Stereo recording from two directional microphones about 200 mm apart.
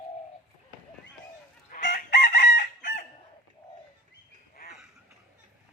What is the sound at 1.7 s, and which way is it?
Chicken, 40° left (ahead or behind).